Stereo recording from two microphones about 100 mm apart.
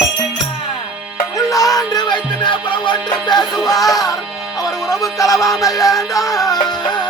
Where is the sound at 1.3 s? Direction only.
35° left (ahead or behind).